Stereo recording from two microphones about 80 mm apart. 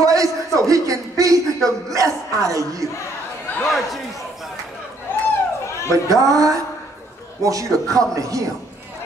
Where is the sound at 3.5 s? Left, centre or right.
Left.